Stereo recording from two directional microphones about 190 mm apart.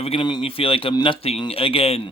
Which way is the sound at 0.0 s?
25° left (ahead or behind).